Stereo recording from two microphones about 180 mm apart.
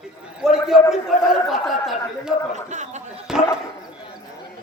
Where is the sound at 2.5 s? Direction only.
40° right (ahead or behind).